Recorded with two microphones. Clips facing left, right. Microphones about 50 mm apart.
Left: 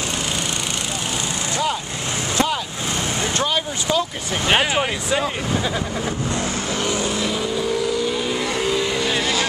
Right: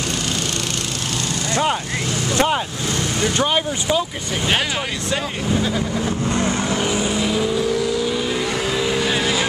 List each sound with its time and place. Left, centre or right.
3.3 s speech: right
4.5 s speech: centre
5.1 s speech: centre
6.7 s vehicle: centre
8.5 s vehicle: centre